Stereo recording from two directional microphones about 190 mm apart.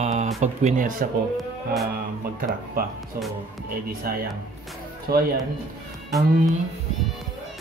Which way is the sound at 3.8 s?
50° right (ahead or behind).